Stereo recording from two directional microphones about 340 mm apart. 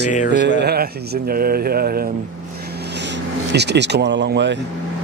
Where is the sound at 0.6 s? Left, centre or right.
Right.